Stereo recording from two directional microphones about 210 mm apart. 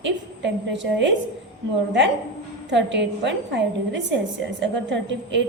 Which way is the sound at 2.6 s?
55° right (ahead or behind).